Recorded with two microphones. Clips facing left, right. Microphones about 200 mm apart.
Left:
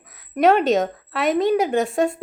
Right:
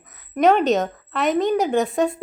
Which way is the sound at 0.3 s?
5° left (ahead or behind).